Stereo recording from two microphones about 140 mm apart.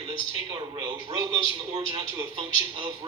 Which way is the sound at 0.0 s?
35° right (ahead or behind).